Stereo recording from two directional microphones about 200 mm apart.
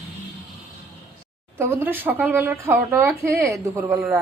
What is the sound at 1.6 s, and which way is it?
Speech, 10° right (ahead or behind).